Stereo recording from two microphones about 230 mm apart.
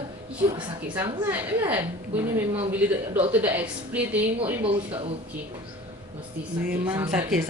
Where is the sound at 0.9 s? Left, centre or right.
Centre.